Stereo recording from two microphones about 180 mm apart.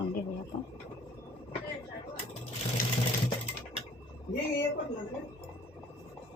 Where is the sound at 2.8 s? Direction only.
50° left (ahead or behind).